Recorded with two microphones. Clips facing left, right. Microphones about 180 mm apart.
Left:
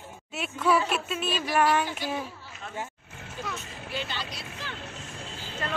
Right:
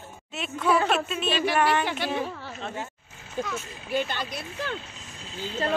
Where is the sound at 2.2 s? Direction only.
65° right (ahead or behind).